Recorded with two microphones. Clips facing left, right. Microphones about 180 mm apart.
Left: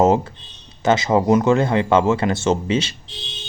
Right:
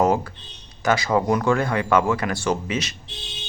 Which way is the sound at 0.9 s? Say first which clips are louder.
Left 4 dB; 20° left (ahead or behind).